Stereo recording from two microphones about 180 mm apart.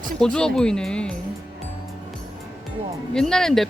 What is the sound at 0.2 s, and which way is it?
Speech, 5° left (ahead or behind).